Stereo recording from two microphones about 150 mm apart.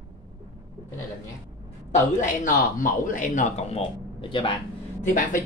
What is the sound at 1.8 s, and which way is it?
A man's voice, 60° left (ahead or behind).